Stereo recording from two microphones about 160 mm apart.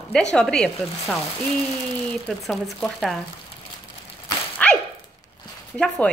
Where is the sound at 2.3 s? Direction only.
Centre (ahead or behind).